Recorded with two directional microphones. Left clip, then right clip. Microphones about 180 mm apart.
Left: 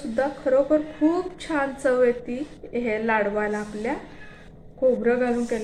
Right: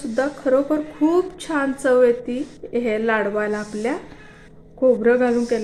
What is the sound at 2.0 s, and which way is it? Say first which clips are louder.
A woman's voice: right 5 dB; 60° right (ahead or behind).